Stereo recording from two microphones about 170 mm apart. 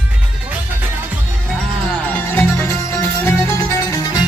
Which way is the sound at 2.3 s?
15° left (ahead or behind).